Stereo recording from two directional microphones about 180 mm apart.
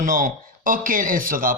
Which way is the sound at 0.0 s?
45° right (ahead or behind).